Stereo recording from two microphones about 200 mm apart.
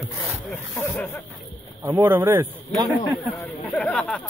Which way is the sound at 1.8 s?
10° right (ahead or behind).